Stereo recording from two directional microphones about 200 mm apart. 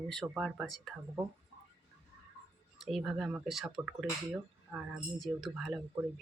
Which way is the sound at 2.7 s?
Centre (ahead or behind).